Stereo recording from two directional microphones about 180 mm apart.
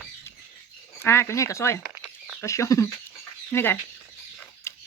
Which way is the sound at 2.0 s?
10° right (ahead or behind).